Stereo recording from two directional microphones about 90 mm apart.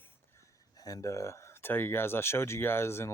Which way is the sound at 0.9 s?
40° left (ahead or behind).